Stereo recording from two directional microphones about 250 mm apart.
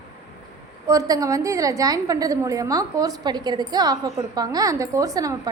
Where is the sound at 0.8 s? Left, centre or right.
Centre.